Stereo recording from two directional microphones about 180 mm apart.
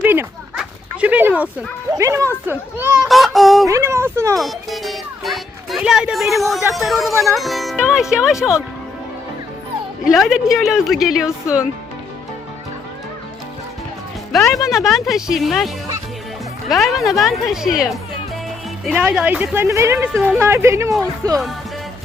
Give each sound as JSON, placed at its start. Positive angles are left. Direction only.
{"t": 0.0, "sound": "a sound", "side_deg": -10}
{"t": 2.0, "sound": "speech", "side_deg": -15}
{"t": 3.1, "sound": "a sound", "side_deg": 0}
{"t": 3.7, "sound": "speech", "side_deg": -15}
{"t": 4.4, "sound": "music", "side_deg": 0}
{"t": 6.7, "sound": "speech", "side_deg": 0}
{"t": 7.1, "sound": "speech", "side_deg": -15}
{"t": 7.3, "sound": "speech", "side_deg": 0}
{"t": 10.1, "sound": "speech", "side_deg": 0}
{"t": 14.3, "sound": "speech", "side_deg": 0}
{"t": 18.9, "sound": "speech", "side_deg": -5}